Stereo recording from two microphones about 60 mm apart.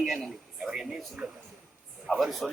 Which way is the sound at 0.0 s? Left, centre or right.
Centre.